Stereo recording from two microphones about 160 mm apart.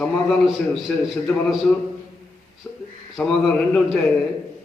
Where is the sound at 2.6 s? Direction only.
10° left (ahead or behind).